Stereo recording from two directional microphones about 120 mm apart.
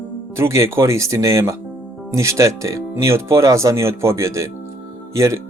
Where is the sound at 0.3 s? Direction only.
25° right (ahead or behind).